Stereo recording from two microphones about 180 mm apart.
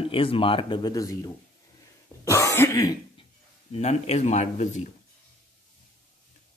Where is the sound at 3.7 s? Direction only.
35° left (ahead or behind).